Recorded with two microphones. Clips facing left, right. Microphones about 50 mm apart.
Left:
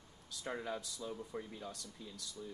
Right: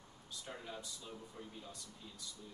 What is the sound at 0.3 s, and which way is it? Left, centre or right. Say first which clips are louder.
Speech: left 7 dB; left.